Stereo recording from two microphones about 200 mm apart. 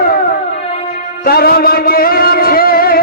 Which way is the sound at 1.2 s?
50° left (ahead or behind).